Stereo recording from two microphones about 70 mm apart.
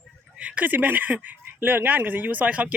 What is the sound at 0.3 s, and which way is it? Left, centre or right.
Speech, right.